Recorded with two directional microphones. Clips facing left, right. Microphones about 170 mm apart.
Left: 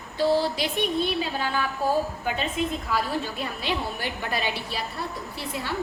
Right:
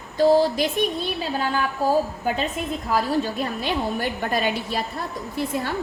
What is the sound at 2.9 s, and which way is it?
A woman's voice, 40° right (ahead or behind).